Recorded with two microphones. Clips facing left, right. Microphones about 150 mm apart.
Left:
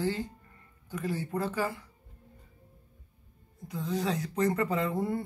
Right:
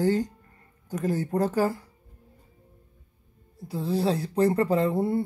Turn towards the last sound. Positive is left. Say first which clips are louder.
# right 6 dB
turn(degrees=-30)  # may be behind; listen again after turning